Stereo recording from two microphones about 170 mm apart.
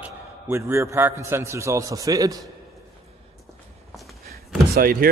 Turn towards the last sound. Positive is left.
turn(degrees=-60)  # may be behind; listen again after turning